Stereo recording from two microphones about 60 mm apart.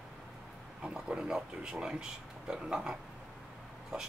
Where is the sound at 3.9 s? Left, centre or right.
Centre.